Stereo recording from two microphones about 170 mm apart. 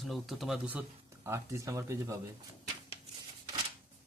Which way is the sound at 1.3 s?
15° right (ahead or behind).